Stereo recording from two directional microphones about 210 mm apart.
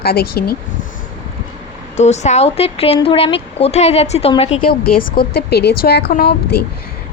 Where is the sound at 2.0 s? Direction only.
35° left (ahead or behind).